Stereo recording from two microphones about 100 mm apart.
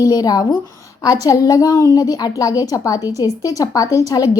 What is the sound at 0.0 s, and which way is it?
A woman's voice, 40° left (ahead or behind).